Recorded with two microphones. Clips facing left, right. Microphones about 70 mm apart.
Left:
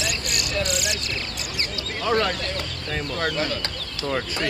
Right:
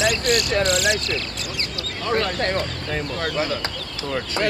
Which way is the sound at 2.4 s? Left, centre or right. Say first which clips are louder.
Right 7 dB; right.